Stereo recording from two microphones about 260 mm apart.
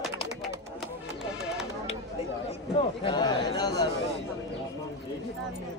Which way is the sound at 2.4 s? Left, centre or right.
Centre.